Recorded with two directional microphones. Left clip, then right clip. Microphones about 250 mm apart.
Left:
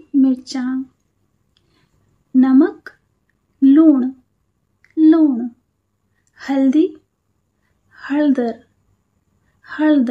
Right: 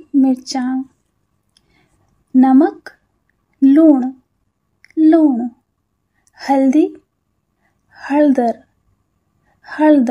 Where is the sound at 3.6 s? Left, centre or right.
Centre.